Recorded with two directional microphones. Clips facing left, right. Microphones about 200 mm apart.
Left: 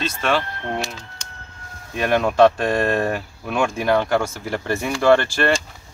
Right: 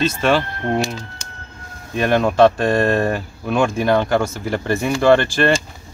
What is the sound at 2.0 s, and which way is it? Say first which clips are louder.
Speech: right 2 dB; 10° left (ahead or behind).